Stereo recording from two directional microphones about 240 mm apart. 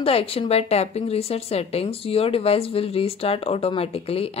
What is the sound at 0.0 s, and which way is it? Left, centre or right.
A woman's voice, left.